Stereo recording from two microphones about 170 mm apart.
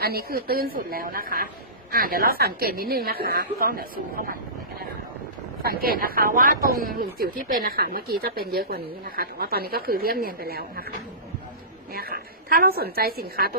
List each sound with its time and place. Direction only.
0.0 s speech: 65° right (ahead or behind)
5.8 s speech: 60° right (ahead or behind)
11.9 s speech: 60° right (ahead or behind)